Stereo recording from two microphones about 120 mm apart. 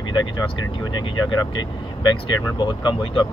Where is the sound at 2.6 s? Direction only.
40° left (ahead or behind).